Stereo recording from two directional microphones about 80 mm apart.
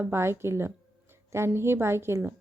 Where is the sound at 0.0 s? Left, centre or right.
Right.